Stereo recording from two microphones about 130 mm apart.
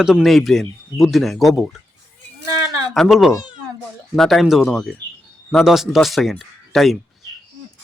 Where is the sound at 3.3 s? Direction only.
30° left (ahead or behind).